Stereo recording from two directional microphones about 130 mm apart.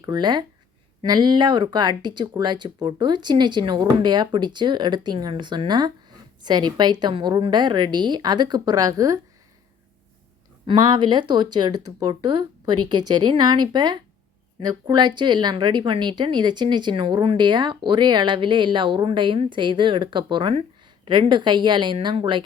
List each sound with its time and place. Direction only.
0.0 s speech: 35° right (ahead or behind)
10.7 s a woman's voice: 35° right (ahead or behind)